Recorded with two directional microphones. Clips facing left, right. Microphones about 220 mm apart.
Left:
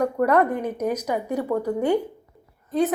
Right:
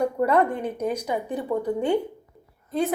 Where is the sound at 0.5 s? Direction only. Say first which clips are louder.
Left 2 dB; 10° left (ahead or behind).